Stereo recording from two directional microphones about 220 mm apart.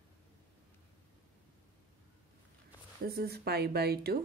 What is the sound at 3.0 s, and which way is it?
Speech, 45° right (ahead or behind).